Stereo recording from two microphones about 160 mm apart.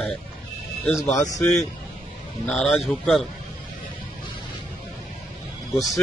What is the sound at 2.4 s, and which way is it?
Speech, 5° left (ahead or behind).